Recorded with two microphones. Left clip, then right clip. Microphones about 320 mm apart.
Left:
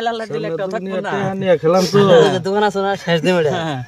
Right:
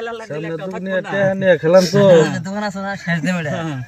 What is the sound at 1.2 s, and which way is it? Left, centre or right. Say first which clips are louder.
Speech: right 1 dB; centre.